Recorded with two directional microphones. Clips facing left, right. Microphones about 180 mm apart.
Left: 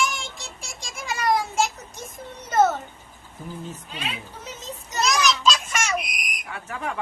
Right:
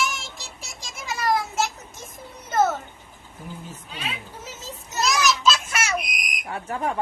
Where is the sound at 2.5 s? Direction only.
Centre (ahead or behind).